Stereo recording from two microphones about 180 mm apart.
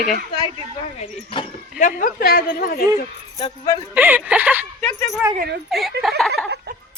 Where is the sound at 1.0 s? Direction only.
30° left (ahead or behind).